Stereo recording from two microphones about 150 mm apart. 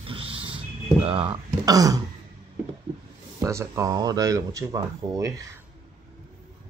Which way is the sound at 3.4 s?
20° right (ahead or behind).